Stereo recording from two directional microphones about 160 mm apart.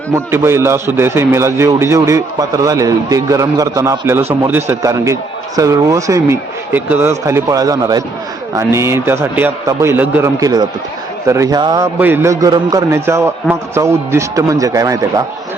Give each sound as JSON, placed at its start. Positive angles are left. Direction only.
{"t": 0.1, "sound": "a man's voice", "side_deg": -15}
{"t": 11.9, "sound": "a man's voice", "side_deg": -10}